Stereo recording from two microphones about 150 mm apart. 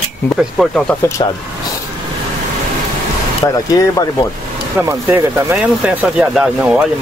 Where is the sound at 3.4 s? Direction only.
25° left (ahead or behind).